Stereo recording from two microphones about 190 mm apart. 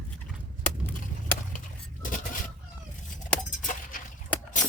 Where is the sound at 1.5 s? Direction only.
45° left (ahead or behind).